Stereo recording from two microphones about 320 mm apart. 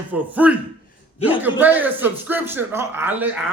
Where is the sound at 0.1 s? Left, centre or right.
Centre.